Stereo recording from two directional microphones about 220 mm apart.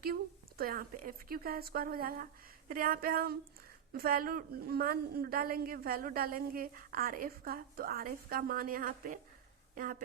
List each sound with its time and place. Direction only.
0.0 s a woman's voice: 40° right (ahead or behind)